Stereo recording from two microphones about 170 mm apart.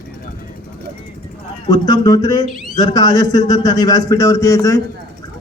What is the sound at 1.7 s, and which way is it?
A man's voice, 25° left (ahead or behind).